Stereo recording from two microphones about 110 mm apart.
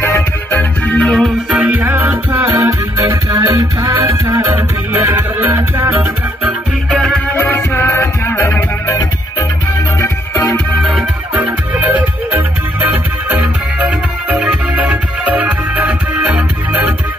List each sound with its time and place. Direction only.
0.5 s music: 15° left (ahead or behind)
1.5 s music: 10° right (ahead or behind)
7.3 s music: 20° left (ahead or behind)
9.9 s music: 25° left (ahead or behind)
10.9 s music: centre (ahead or behind)
11.4 s music: 15° right (ahead or behind)